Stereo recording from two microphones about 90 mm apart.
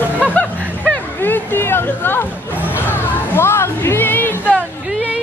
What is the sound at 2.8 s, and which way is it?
Music, 25° left (ahead or behind).